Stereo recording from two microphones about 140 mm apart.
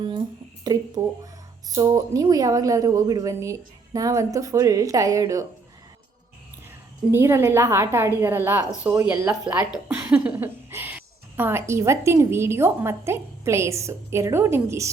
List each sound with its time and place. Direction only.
0.6 s a woman's voice: 30° right (ahead or behind)
7.1 s a woman's voice: 20° right (ahead or behind)